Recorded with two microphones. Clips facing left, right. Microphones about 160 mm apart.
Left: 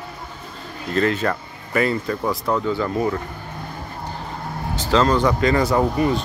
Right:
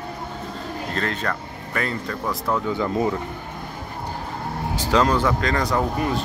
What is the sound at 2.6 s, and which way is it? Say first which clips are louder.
Speech: left 1 dB; 20° right (ahead or behind).